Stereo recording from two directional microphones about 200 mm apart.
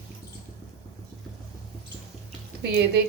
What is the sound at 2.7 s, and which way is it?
Speech, 55° right (ahead or behind).